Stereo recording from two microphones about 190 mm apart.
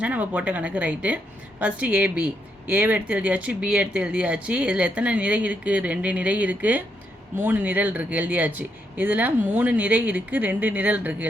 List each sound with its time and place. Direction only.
0.0 s a woman's voice: 10° right (ahead or behind)